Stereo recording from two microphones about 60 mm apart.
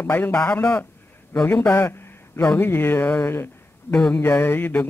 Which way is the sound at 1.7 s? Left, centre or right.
Left.